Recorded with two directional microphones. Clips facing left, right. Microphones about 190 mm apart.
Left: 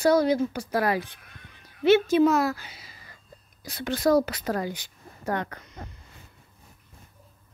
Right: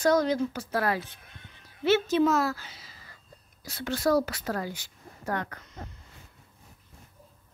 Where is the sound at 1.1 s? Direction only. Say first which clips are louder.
Left 1 dB; 30° right (ahead or behind).